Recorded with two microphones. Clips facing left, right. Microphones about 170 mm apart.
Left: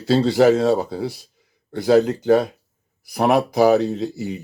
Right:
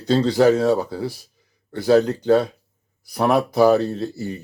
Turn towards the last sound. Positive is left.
turn(degrees=15)  # may be behind; listen again after turning